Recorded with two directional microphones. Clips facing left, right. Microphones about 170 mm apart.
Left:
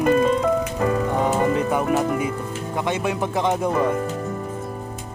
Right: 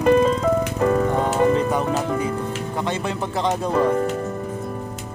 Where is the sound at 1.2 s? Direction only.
10° left (ahead or behind).